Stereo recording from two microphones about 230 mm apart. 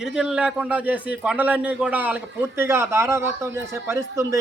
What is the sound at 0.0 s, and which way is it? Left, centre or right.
A man's voice, centre.